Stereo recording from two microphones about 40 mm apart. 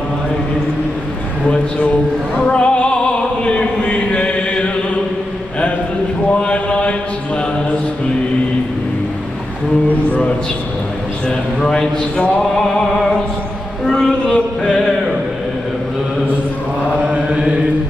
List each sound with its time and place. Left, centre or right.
2.4 s music: left
3.4 s chant: left
6.4 s mantra: left
11.2 s a man's voice: centre
13.8 s a sound: centre
14.7 s music: centre